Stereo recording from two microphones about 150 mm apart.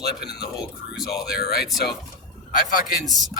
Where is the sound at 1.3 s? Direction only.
90° left.